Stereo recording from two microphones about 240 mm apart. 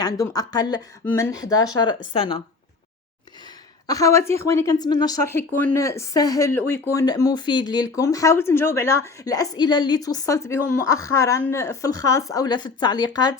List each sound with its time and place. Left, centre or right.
0.0 s a woman's voice: centre
3.8 s a woman's voice: centre